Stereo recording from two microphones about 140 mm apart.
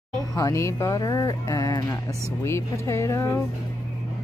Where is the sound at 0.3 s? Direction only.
25° left (ahead or behind).